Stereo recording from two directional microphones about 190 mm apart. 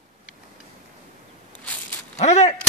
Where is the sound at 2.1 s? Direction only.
35° left (ahead or behind).